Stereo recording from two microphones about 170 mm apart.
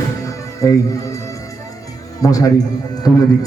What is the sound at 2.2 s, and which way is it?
Speech, 20° left (ahead or behind).